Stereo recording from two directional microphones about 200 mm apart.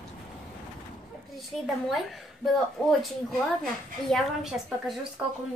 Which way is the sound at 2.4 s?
Centre (ahead or behind).